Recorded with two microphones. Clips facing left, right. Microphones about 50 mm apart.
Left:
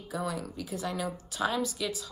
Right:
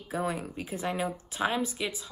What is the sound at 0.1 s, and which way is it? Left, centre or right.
A woman's voice, right.